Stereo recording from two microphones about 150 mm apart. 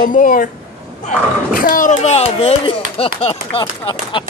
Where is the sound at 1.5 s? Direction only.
70° left (ahead or behind).